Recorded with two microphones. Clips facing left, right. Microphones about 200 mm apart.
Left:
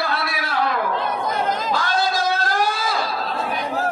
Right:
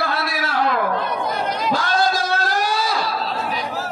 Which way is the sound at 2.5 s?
50° left (ahead or behind).